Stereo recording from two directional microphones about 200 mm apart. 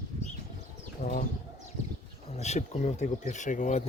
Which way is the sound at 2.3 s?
35° left (ahead or behind).